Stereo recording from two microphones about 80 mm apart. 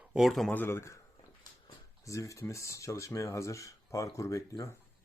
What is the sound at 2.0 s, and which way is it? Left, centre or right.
Speech, left.